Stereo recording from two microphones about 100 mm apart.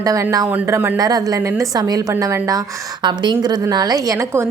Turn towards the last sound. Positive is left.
turn(degrees=-35)  # may be behind; listen again after turning